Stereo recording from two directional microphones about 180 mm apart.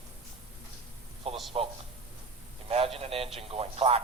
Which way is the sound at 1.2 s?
35° right (ahead or behind).